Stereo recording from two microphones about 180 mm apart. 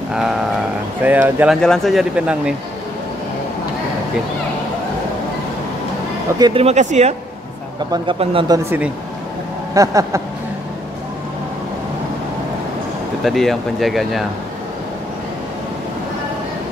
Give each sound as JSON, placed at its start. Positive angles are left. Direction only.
{"t": 0.1, "sound": "speech", "side_deg": -5}
{"t": 6.3, "sound": "speech", "side_deg": -20}
{"t": 6.6, "sound": "speech", "side_deg": -40}
{"t": 7.9, "sound": "speech", "side_deg": -30}
{"t": 8.6, "sound": "speech", "side_deg": -10}
{"t": 13.2, "sound": "speech", "side_deg": 0}